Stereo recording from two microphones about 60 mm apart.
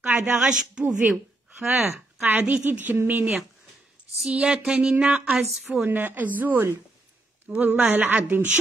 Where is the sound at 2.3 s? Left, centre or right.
Right.